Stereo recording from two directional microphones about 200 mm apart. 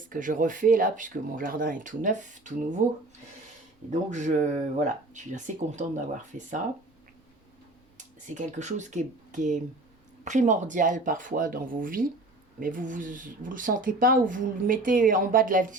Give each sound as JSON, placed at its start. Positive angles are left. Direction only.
{"t": 0.1, "sound": "speech", "side_deg": -40}
{"t": 4.1, "sound": "speech", "side_deg": -35}
{"t": 7.9, "sound": "speech", "side_deg": -35}